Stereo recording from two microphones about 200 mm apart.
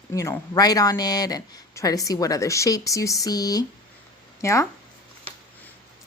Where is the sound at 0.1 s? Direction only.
15° left (ahead or behind).